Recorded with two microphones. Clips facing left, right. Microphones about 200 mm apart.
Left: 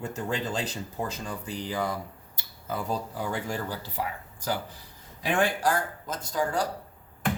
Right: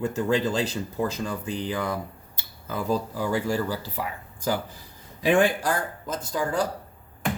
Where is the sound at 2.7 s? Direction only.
90° right.